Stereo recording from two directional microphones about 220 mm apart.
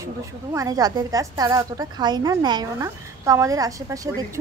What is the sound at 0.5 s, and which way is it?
Speech, 15° right (ahead or behind).